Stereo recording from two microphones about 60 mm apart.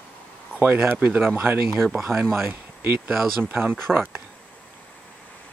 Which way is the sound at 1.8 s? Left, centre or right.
Centre.